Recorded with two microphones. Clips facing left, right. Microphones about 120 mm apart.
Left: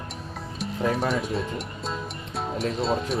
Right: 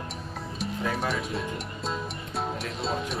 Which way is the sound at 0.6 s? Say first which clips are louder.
Left 4 dB; centre (ahead or behind).